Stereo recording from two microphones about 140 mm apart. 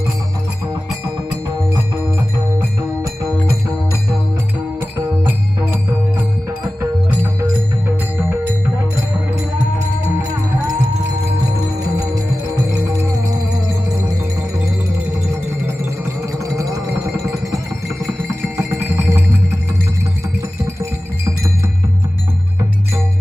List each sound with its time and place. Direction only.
4.9 s music: 20° right (ahead or behind)
12.0 s music: 25° right (ahead or behind)
16.2 s music: 25° right (ahead or behind)